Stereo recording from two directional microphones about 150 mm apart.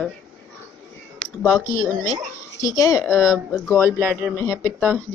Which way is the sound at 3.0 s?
5° right (ahead or behind).